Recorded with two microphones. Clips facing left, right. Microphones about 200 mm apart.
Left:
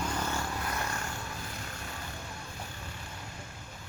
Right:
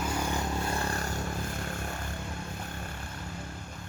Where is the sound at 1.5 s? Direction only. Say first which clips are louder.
Right 6 dB; 50° right (ahead or behind).